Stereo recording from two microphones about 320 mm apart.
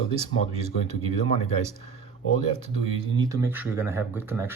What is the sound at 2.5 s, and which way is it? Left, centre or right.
Speech, centre.